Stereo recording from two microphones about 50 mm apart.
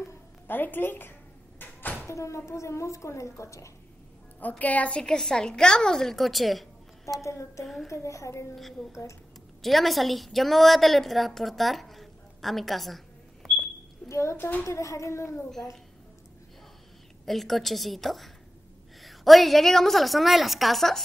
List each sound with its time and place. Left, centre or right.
0.5 s a woman's voice: left
1.6 s door: left
2.0 s speech: left
4.4 s a woman's voice: left; by 7.2 s centre
7.2 s speech: left
7.6 s a woman's voice: centre
7.9 s a woman's voice: left
9.6 s a woman's voice: centre
14.0 s a child's voice: left
14.6 s a child's voice: left
17.3 s a woman's voice: centre